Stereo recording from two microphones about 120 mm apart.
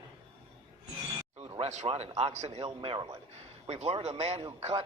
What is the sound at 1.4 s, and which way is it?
A man's voice, 60° right (ahead or behind).